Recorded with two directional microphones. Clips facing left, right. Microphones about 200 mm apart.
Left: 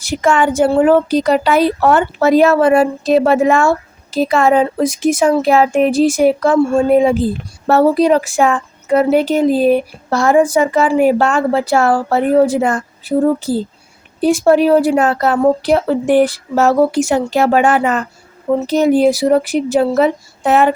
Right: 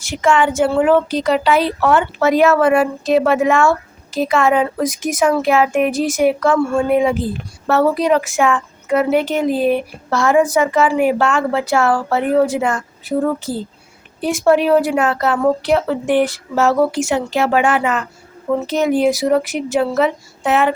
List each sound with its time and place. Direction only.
0.0 s speech: 40° left (ahead or behind)